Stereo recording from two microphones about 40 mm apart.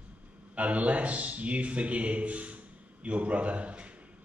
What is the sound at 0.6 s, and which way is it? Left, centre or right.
A man's voice, right.